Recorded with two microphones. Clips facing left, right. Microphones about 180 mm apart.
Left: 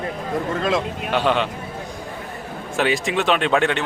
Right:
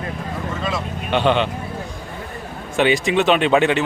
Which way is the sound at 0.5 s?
60° left (ahead or behind).